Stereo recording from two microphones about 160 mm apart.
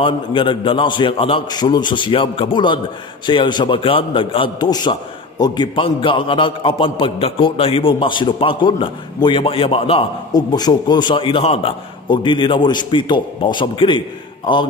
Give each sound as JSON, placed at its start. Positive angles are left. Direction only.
{"t": 0.0, "sound": "a man's voice", "side_deg": 30}
{"t": 10.3, "sound": "a man's voice", "side_deg": 25}